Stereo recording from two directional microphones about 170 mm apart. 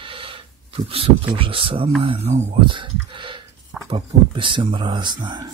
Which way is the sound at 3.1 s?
30° right (ahead or behind).